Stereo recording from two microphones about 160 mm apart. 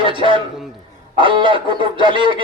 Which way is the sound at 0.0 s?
30° right (ahead or behind).